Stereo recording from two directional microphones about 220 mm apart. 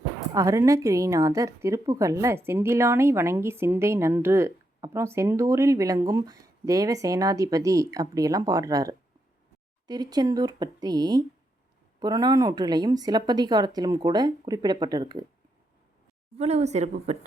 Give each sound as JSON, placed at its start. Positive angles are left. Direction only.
{"t": 0.3, "sound": "a woman's voice", "side_deg": -15}
{"t": 16.4, "sound": "speech", "side_deg": -30}